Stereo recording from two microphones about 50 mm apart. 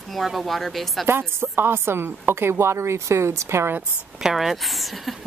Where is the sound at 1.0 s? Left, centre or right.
Right.